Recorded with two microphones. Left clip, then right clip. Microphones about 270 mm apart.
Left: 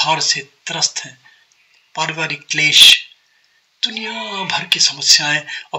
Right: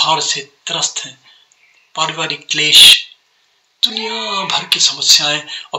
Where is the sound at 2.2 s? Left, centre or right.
Left.